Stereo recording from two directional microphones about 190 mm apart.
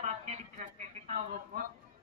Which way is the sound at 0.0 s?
35° right (ahead or behind).